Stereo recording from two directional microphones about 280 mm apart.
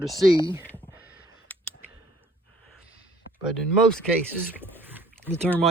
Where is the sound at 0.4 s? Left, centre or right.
Centre.